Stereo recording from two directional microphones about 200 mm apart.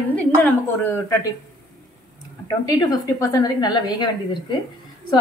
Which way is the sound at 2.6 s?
20° left (ahead or behind).